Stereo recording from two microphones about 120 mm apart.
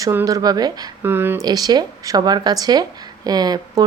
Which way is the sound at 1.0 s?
20° right (ahead or behind).